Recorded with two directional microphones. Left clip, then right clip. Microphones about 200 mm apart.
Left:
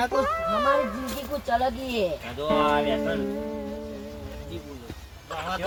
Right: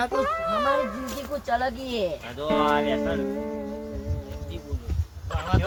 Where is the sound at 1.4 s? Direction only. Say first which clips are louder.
Left 1 dB; 15° left (ahead or behind); by 3.8 s centre (ahead or behind).